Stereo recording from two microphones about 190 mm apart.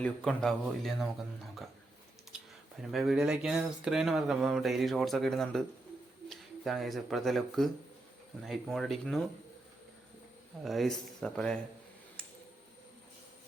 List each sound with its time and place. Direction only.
0.0 s speech: 5° left (ahead or behind)
2.3 s computer keyboard: 5° right (ahead or behind)
2.8 s speech: centre (ahead or behind)
10.6 s speech: centre (ahead or behind)